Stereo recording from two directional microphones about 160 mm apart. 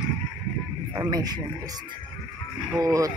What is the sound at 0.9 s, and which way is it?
Speech, 25° right (ahead or behind).